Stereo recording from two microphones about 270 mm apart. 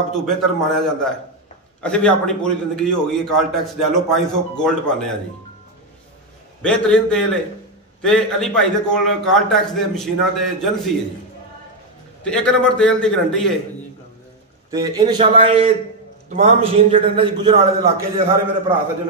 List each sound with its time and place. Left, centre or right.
0.1 s a man's voice: centre
6.6 s a man's voice: centre
12.3 s a man's voice: centre
14.7 s a man's voice: centre